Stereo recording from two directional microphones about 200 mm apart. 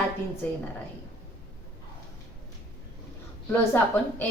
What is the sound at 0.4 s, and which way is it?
Speech, 10° left (ahead or behind).